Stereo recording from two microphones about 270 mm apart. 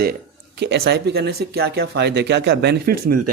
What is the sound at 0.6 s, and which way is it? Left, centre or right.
A man's voice, right.